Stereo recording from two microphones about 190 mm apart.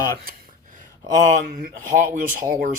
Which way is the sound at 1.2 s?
40° right (ahead or behind).